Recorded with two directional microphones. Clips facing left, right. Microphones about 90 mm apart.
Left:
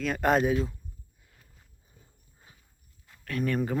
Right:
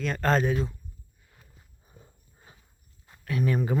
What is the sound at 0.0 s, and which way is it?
Speech, 10° left (ahead or behind).